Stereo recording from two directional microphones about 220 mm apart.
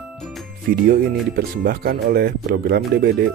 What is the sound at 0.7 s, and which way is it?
Speech, 45° right (ahead or behind).